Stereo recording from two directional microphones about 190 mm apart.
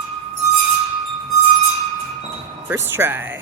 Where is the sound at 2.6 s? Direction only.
10° right (ahead or behind).